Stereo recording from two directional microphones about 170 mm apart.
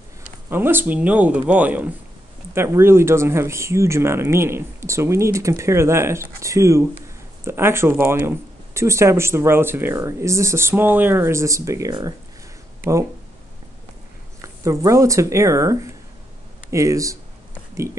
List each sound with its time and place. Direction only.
0.5 s speech: 10° right (ahead or behind)
14.4 s speech: 20° right (ahead or behind)